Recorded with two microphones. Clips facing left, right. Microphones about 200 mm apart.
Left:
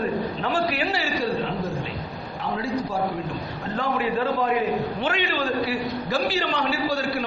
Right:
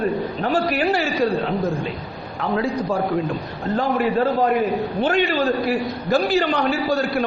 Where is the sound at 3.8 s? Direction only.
40° right (ahead or behind).